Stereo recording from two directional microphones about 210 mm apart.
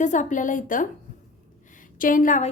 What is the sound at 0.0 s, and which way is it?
A woman's voice, 35° left (ahead or behind).